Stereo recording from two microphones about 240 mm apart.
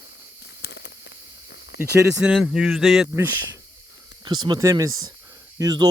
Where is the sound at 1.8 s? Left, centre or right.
Centre.